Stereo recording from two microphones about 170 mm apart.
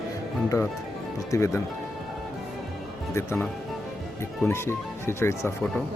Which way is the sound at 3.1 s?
15° left (ahead or behind).